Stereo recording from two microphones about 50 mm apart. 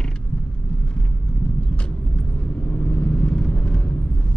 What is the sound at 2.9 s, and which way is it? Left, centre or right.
Vehicle, left.